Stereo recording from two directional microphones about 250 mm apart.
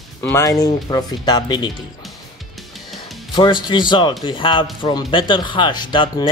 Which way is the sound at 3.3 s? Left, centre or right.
Centre.